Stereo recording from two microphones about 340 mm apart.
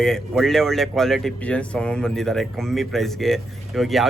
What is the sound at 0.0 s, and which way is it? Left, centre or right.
Speech, centre.